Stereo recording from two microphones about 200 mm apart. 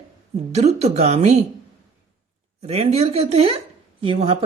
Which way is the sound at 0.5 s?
35° right (ahead or behind).